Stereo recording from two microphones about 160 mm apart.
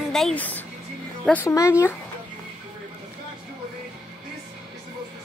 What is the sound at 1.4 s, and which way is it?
Speech, 20° left (ahead or behind).